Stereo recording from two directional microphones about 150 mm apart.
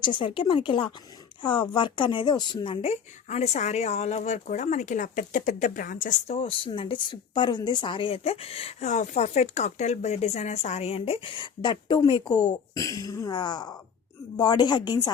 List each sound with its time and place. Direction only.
0.0 s speech: 35° left (ahead or behind)
2.8 s speech: 45° left (ahead or behind)
6.3 s speech: 40° left (ahead or behind)